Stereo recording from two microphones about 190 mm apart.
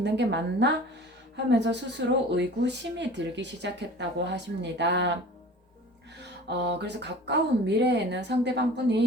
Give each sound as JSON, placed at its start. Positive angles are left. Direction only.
{"t": 0.0, "sound": "speech", "side_deg": -65}
{"t": 6.1, "sound": "speech", "side_deg": -60}